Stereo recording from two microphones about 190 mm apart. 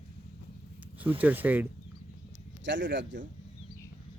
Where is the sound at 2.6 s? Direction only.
70° right (ahead or behind).